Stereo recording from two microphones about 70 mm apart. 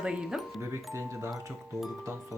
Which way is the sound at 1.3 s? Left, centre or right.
Right.